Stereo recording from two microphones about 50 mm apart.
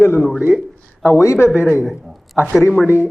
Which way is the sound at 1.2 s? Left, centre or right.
Left.